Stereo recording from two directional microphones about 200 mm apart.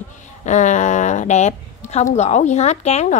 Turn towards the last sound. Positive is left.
turn(degrees=35)  # may be behind; listen again after turning